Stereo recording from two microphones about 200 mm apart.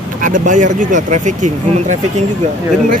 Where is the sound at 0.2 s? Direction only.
40° right (ahead or behind).